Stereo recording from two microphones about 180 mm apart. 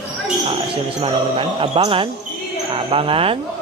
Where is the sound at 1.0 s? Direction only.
30° right (ahead or behind).